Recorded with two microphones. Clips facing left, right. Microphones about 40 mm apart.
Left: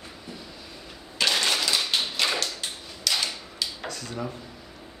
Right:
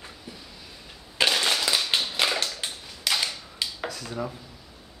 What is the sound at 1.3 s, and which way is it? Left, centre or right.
Crushing, centre.